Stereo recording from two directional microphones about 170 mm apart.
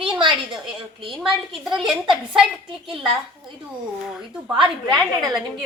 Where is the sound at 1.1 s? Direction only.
Centre (ahead or behind).